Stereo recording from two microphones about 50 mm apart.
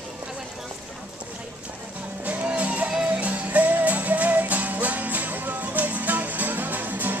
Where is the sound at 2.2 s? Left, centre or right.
Right.